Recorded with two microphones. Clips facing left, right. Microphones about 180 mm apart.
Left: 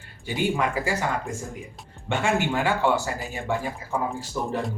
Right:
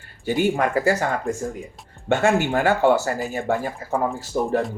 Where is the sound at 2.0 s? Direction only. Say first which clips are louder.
Right 5 dB; 45° right (ahead or behind).